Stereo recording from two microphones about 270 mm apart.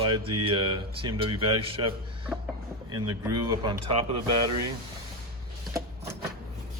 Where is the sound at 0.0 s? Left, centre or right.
Centre.